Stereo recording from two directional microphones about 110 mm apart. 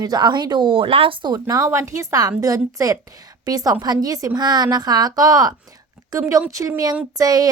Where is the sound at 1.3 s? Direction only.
35° right (ahead or behind).